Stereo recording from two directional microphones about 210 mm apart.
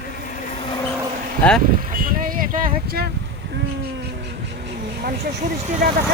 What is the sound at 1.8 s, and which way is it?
Vehicle, 40° right (ahead or behind).